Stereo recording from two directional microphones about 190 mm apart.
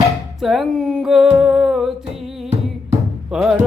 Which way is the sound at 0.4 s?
Centre (ahead or behind).